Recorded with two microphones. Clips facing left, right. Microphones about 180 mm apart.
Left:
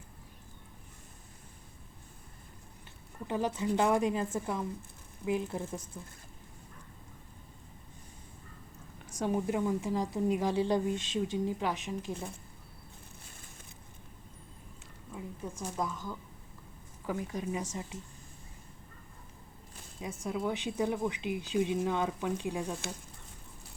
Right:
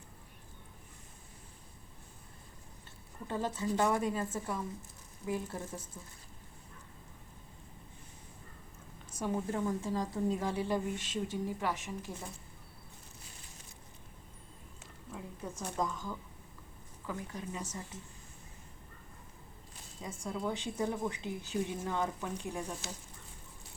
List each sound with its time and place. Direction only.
3.2 s speech: 15° left (ahead or behind)
9.2 s speech: 15° left (ahead or behind)
15.1 s speech: 5° left (ahead or behind)
20.0 s speech: 10° left (ahead or behind)